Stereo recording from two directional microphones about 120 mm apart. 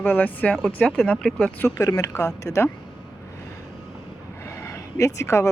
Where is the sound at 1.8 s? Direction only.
25° left (ahead or behind).